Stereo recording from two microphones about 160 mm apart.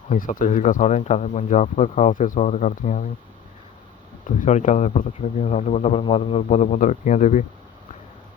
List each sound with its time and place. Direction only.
0.1 s speech: 55° left (ahead or behind)
4.4 s speech: 50° left (ahead or behind)